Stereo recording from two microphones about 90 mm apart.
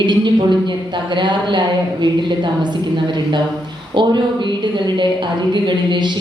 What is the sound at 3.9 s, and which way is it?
A woman's voice, 60° right (ahead or behind).